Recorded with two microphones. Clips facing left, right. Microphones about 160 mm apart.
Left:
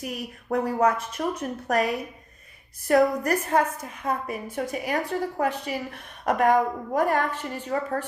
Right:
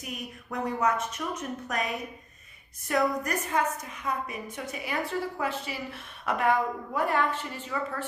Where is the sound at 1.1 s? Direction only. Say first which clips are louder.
Left 5 dB; 60° left (ahead or behind).